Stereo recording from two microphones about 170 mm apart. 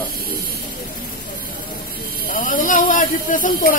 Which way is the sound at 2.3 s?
55° left (ahead or behind).